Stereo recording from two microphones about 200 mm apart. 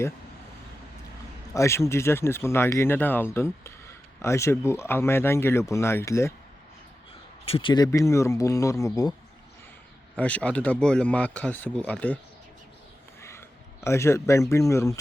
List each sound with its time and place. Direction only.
1.5 s speech: 15° left (ahead or behind)
7.4 s speech: 25° left (ahead or behind)
10.2 s speech: 5° left (ahead or behind)
13.8 s speech: 15° left (ahead or behind)